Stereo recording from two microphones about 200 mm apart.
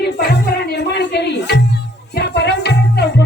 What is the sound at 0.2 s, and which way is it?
Music, 55° left (ahead or behind).